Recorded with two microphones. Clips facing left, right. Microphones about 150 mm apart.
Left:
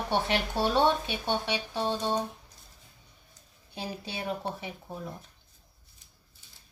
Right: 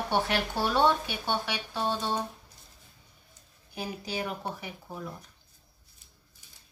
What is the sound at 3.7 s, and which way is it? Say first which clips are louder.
Speech: right 2 dB; 25° left (ahead or behind).